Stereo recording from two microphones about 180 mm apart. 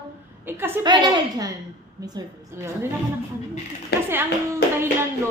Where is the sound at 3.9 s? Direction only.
65° left (ahead or behind).